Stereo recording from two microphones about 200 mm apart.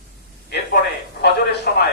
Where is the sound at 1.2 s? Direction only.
55° left (ahead or behind).